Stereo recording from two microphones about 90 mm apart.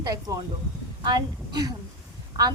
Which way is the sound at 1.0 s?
55° right (ahead or behind).